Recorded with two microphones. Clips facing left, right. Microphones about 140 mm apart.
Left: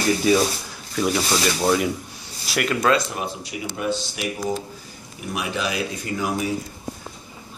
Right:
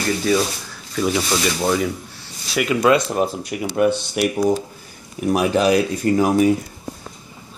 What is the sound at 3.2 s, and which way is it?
Speech, 55° right (ahead or behind).